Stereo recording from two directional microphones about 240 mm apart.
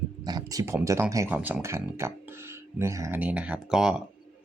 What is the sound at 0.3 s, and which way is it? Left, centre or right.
Speech, centre.